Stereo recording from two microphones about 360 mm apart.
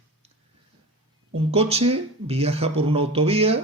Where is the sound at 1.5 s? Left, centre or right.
Centre.